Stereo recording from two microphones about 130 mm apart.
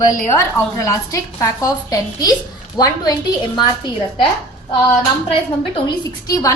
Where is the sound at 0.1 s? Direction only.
25° left (ahead or behind).